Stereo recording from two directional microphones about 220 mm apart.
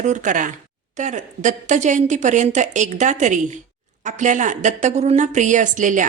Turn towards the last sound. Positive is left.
turn(degrees=-35)  # may be behind; listen again after turning